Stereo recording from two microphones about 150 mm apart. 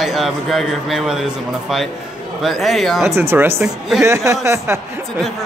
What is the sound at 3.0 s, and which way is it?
Speech, 15° right (ahead or behind).